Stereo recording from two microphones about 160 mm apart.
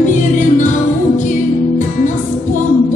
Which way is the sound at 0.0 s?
50° left (ahead or behind).